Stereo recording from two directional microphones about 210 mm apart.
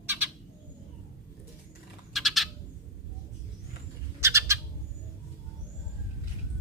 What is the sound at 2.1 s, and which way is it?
Frog, centre (ahead or behind).